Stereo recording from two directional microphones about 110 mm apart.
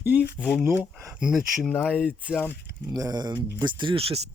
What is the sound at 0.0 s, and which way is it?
Speech, 15° right (ahead or behind).